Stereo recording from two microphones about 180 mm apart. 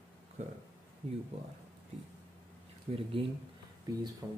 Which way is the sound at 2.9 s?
40° right (ahead or behind).